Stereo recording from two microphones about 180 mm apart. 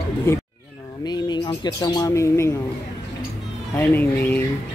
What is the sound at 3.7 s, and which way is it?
Speech, 10° left (ahead or behind).